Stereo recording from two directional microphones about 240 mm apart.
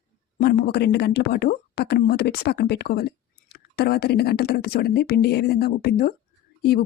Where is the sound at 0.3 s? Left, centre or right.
Left.